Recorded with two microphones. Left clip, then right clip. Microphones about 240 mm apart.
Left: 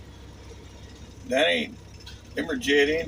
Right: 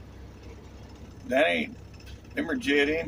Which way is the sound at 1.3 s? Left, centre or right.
Centre.